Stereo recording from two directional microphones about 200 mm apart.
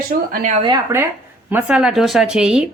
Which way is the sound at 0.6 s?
15° right (ahead or behind).